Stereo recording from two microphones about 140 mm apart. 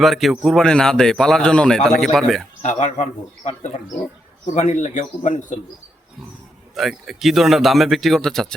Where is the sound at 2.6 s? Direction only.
55° left (ahead or behind).